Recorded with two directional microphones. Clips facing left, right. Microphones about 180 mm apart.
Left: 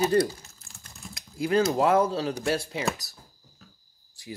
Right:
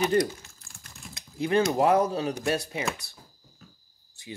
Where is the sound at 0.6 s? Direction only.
20° left (ahead or behind).